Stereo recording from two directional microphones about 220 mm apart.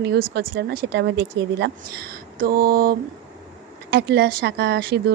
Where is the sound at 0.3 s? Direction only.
50° right (ahead or behind).